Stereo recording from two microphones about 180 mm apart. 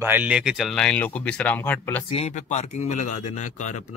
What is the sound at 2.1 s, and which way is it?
Speech, 35° left (ahead or behind).